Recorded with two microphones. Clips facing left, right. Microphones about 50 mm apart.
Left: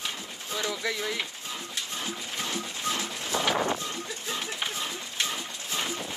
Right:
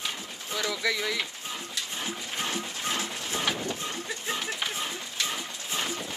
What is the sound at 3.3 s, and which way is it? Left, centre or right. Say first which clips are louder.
Vehicle: left 4 dB; left.